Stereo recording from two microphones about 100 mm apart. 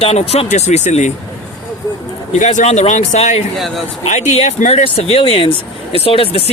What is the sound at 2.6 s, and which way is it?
Speech, 90° left.